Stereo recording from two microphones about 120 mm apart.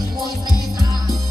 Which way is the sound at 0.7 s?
30° right (ahead or behind).